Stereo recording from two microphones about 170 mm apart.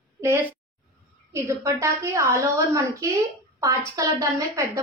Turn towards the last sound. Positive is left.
turn(degrees=-20)  # may be behind; listen again after turning